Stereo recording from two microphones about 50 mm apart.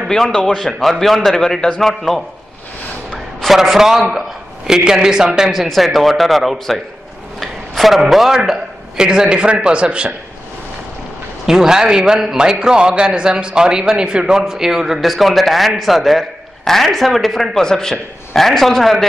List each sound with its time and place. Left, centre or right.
0.1 s a man's voice: centre
3.4 s a man's voice: centre
7.3 s a sound: centre
8.0 s a man's voice: centre
11.4 s a man's voice: centre